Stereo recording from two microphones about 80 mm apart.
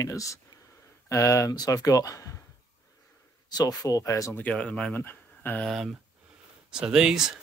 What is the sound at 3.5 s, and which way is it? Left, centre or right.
Speech, left.